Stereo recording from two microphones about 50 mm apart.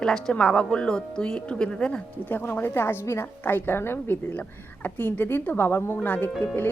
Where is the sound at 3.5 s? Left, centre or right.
Left.